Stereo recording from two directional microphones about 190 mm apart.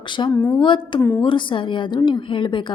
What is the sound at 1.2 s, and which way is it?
Speech, 25° left (ahead or behind).